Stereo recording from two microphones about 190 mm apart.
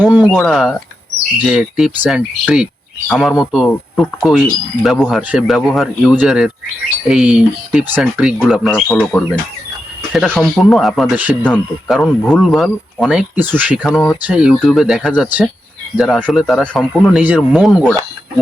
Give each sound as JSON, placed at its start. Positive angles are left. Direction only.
{"t": 0.0, "sound": "speech", "side_deg": -10}
{"t": 11.9, "sound": "speech", "side_deg": 5}
{"t": 13.8, "sound": "speech", "side_deg": 5}